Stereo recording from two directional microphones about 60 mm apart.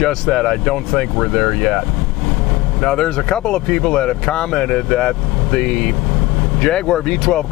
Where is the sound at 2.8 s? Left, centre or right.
Centre.